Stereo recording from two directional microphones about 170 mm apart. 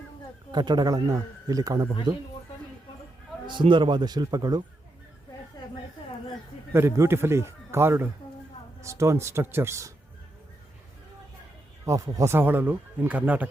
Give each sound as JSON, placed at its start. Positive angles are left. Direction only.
{"t": 0.5, "sound": "speech", "side_deg": -25}
{"t": 3.4, "sound": "speech", "side_deg": -30}
{"t": 6.7, "sound": "speech", "side_deg": -15}
{"t": 11.9, "sound": "speech", "side_deg": -20}